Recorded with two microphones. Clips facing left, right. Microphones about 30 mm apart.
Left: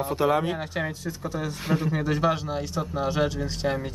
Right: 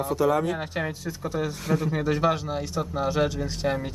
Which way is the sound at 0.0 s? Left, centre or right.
Left.